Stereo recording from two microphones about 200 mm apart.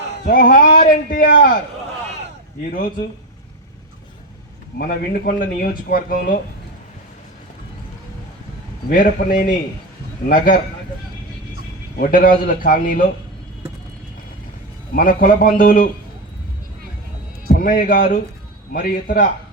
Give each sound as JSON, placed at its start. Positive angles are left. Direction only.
{"t": 0.3, "sound": "speech", "side_deg": 45}
{"t": 4.8, "sound": "speech", "side_deg": 45}
{"t": 8.9, "sound": "speech", "side_deg": 40}
{"t": 11.9, "sound": "speech", "side_deg": 45}
{"t": 14.9, "sound": "speech", "side_deg": 45}
{"t": 17.5, "sound": "speech", "side_deg": 45}